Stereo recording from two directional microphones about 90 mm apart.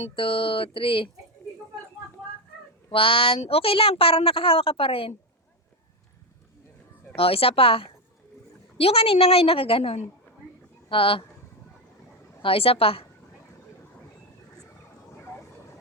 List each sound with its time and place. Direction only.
0.2 s speech: 80° left
2.9 s a woman's voice: 90° left
7.2 s a woman's voice: 90° left
12.4 s a woman's voice: 90° left